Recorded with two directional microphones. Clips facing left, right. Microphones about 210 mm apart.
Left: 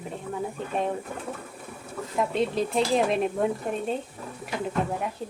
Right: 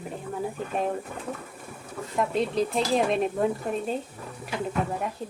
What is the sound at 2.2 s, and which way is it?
A woman's voice, centre (ahead or behind).